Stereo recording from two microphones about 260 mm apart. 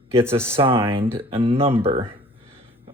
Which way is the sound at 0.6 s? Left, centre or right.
Centre.